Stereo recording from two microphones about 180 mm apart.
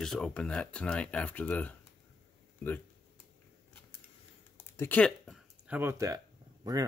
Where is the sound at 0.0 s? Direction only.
5° left (ahead or behind).